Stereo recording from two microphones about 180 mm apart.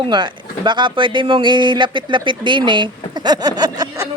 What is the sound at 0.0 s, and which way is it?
Speech, 25° right (ahead or behind).